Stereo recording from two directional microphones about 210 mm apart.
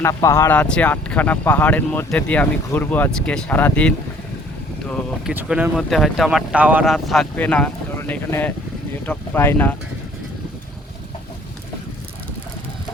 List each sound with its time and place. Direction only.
0.0 s speech: 15° left (ahead or behind)
5.3 s speech: 10° right (ahead or behind); by 9.7 s 10° left (ahead or behind)